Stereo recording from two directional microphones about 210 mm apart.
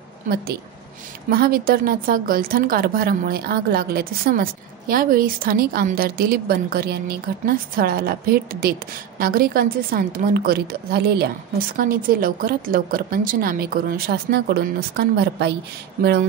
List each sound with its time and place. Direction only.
1.3 s a woman's voice: 45° right (ahead or behind)